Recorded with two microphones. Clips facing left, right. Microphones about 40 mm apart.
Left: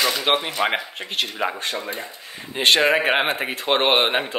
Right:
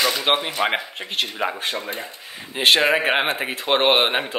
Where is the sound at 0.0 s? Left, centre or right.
Centre.